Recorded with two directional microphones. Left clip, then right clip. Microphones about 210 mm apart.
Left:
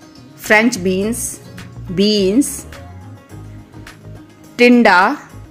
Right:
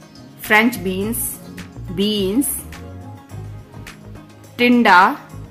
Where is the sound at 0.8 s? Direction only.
20° left (ahead or behind).